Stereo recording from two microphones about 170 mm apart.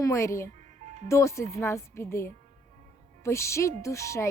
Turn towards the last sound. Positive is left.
turn(degrees=15)  # may be behind; listen again after turning